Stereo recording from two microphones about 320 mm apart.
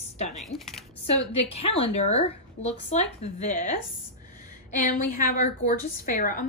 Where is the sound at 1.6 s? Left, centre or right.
Centre.